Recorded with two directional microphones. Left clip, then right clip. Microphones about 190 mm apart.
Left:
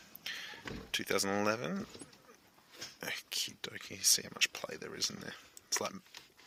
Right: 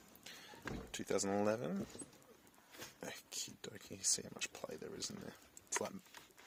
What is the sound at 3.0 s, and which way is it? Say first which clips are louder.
Speech: left 10 dB; centre (ahead or behind).